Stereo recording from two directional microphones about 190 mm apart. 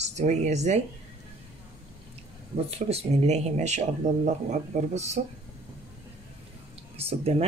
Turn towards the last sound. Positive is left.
turn(degrees=-30)  # may be behind; listen again after turning